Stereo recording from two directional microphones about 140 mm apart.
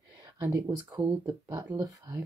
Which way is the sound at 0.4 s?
20° right (ahead or behind).